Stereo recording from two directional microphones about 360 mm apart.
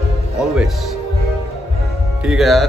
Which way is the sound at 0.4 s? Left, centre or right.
Centre.